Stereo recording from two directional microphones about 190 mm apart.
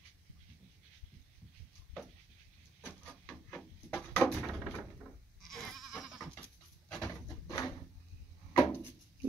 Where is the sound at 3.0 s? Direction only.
5° left (ahead or behind).